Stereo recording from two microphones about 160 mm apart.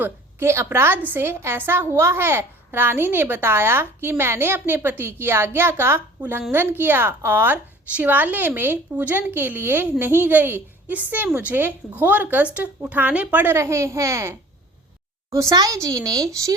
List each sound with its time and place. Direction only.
0.0 s a woman's voice: 15° right (ahead or behind)